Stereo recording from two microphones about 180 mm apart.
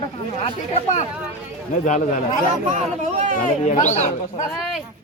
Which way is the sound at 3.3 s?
40° left (ahead or behind).